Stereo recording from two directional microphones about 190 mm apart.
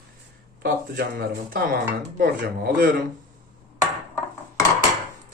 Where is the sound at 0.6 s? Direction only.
55° right (ahead or behind).